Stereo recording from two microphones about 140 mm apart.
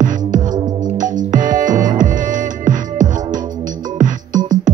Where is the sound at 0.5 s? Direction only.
30° right (ahead or behind).